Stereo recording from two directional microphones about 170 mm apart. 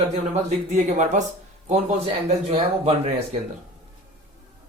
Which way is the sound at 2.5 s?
35° right (ahead or behind).